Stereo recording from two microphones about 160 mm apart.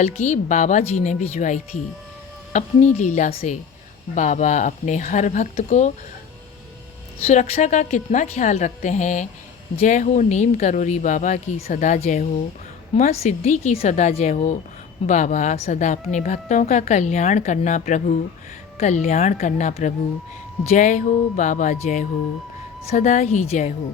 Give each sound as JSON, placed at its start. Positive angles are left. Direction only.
{"t": 0.0, "sound": "a woman's voice", "side_deg": 50}
{"t": 7.3, "sound": "a woman's voice", "side_deg": 40}